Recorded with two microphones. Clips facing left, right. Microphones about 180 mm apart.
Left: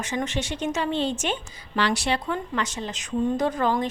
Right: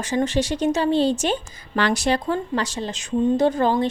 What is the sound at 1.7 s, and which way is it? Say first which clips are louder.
A woman's voice: right 4 dB; 45° right (ahead or behind).